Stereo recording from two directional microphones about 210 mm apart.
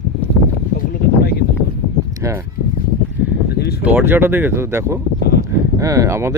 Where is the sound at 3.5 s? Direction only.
50° left (ahead or behind).